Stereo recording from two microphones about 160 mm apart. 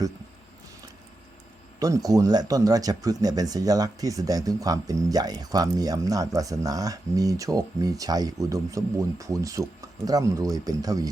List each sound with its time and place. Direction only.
1.8 s speech: 20° right (ahead or behind)